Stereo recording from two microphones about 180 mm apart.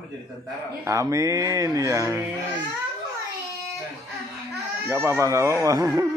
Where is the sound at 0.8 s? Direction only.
15° right (ahead or behind).